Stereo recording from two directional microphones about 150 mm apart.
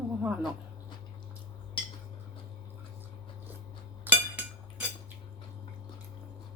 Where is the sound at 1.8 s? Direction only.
35° left (ahead or behind).